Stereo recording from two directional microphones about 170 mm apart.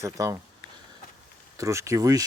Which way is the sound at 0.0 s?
20° right (ahead or behind).